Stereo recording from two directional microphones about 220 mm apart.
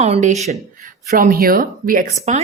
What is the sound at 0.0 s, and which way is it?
A woman's voice, 30° right (ahead or behind).